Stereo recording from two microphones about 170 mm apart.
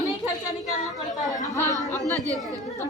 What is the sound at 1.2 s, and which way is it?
Speech, 20° left (ahead or behind).